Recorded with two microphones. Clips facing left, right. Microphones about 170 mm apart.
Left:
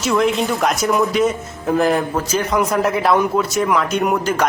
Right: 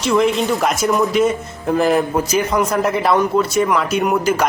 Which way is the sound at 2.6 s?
Centre (ahead or behind).